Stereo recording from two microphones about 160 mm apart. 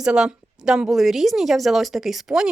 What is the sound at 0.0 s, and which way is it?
A woman's voice, 5° right (ahead or behind).